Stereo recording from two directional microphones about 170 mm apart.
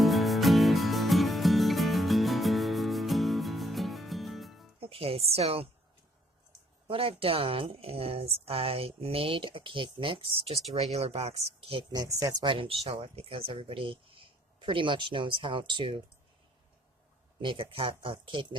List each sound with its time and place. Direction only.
0.0 s music: centre (ahead or behind)
4.8 s a woman's voice: 35° right (ahead or behind)
6.8 s speech: 35° right (ahead or behind)
11.9 s speech: 20° right (ahead or behind)
17.4 s speech: 30° right (ahead or behind)